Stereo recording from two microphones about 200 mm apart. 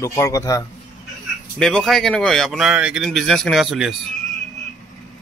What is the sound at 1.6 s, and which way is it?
Speech, 5° left (ahead or behind).